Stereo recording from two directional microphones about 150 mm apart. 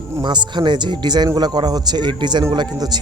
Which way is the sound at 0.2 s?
30° right (ahead or behind).